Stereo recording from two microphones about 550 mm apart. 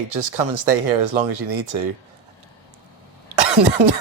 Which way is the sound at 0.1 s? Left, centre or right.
Right.